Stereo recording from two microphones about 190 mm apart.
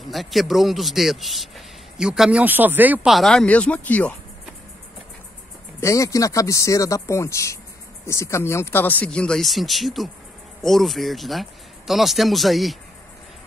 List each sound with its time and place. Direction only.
0.0 s a man's voice: centre (ahead or behind)
5.8 s a man's voice: 15° left (ahead or behind); by 12.7 s centre (ahead or behind)